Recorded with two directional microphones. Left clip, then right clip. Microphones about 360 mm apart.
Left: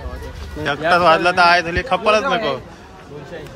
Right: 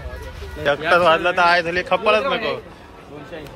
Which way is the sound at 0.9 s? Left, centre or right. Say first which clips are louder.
Left 3 dB; centre.